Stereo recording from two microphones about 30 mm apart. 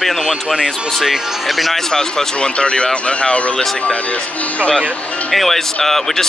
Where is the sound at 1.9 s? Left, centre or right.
Centre.